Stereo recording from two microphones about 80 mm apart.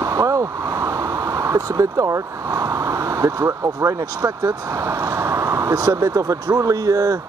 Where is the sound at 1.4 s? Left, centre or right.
Right.